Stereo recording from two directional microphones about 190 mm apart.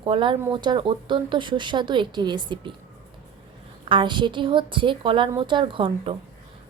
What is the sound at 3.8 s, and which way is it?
A woman's voice, 25° right (ahead or behind).